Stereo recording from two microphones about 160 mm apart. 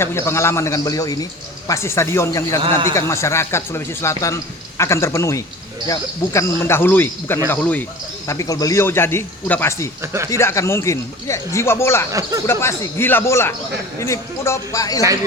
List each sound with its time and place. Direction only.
0.0 s a man's voice: 15° left (ahead or behind)
2.6 s a man's voice: 35° right (ahead or behind)
2.9 s a man's voice: 20° left (ahead or behind)
10.0 s speech: 15° right (ahead or behind)
10.2 s a man's voice: 20° left (ahead or behind)